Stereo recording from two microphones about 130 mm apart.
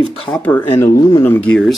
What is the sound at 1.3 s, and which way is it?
Speech, 10° left (ahead or behind).